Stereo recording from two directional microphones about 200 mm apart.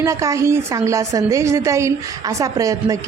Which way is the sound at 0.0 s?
15° right (ahead or behind).